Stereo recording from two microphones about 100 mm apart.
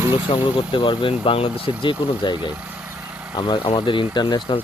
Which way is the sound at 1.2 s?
75° left (ahead or behind).